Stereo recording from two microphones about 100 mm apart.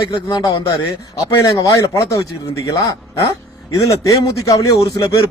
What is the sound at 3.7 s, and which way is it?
A man's voice, 35° left (ahead or behind).